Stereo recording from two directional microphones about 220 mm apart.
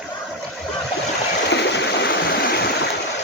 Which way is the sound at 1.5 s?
50° left (ahead or behind).